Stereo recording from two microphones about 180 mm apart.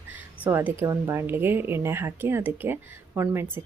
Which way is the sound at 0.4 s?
10° right (ahead or behind).